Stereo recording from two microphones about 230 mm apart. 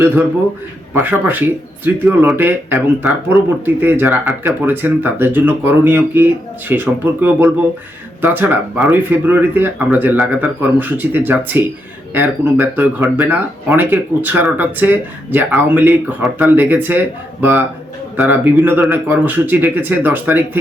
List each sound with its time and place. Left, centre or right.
0.9 s speech: centre